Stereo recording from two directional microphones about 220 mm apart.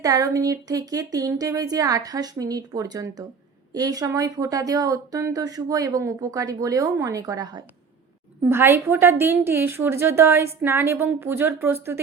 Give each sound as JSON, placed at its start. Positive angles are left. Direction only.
{"t": 0.0, "sound": "speech", "side_deg": -15}